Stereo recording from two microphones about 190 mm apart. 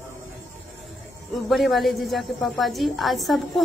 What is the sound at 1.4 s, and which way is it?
A woman's voice, centre (ahead or behind).